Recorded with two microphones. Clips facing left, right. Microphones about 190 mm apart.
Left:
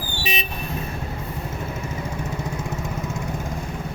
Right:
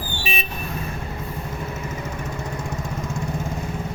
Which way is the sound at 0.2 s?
20° left (ahead or behind).